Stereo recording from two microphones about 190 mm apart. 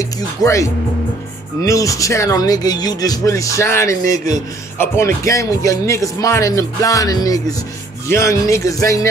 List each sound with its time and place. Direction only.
0.4 s speech: 15° left (ahead or behind)